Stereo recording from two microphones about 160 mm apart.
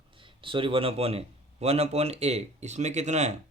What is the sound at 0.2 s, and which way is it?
Speech, 30° right (ahead or behind).